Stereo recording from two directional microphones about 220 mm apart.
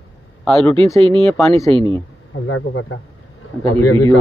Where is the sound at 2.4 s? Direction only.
65° left (ahead or behind).